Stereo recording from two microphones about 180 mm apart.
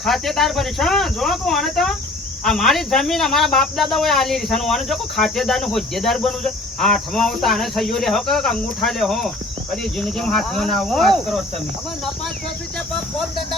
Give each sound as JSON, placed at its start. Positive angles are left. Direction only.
{"t": 0.0, "sound": "speech", "side_deg": 0}
{"t": 12.9, "sound": "speech", "side_deg": 0}